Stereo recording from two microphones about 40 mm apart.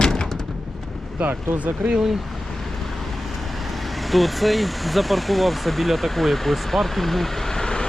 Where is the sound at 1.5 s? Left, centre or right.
Right.